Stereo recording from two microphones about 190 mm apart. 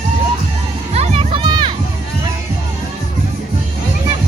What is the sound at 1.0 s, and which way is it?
Music, 30° right (ahead or behind).